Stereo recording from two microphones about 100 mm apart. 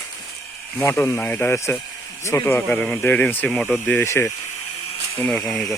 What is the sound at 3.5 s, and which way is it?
Speech, 5° left (ahead or behind).